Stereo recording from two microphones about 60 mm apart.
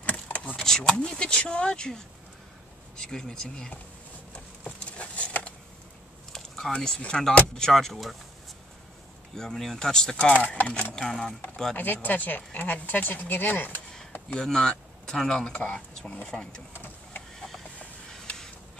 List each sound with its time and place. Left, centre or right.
0.0 s power windows: left
0.7 s speech: centre
4.3 s patter: centre
6.3 s speech: centre
9.3 s speech: centre
10.1 s speech: left
10.7 s speech: centre
11.7 s speech: left
14.3 s speech: centre
16.7 s printer: left
17.7 s a sound: centre